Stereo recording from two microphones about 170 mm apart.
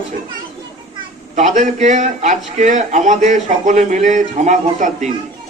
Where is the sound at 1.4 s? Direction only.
45° right (ahead or behind).